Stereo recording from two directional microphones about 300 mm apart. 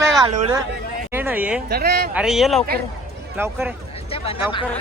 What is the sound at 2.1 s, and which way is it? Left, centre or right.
A woman's voice, centre.